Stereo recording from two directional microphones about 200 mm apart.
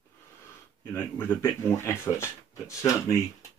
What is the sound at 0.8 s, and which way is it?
Speech, 10° left (ahead or behind).